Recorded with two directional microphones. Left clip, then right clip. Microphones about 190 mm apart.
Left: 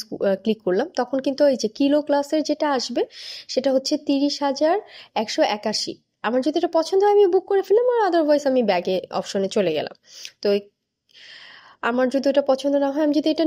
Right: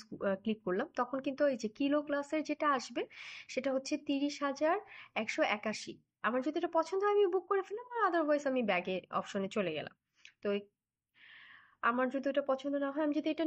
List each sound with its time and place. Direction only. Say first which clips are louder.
0.0 s speech: left 14 dB; 40° left (ahead or behind)
11.8 s speech: left 12 dB; 40° left (ahead or behind)